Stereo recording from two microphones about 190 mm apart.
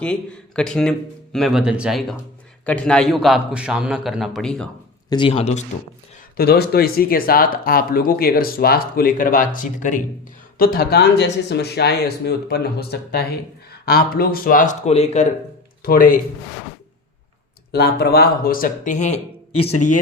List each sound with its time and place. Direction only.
0.0 s speech: 5° left (ahead or behind)
5.0 s speech: 25° left (ahead or behind)
6.3 s speech: 55° left (ahead or behind); by 15.3 s 35° left (ahead or behind)
15.8 s speech: 50° left (ahead or behind)
17.7 s speech: 60° left (ahead or behind); by 19.2 s 40° left (ahead or behind)